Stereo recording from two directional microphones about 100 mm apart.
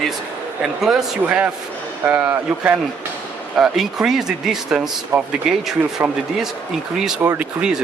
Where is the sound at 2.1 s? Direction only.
15° right (ahead or behind).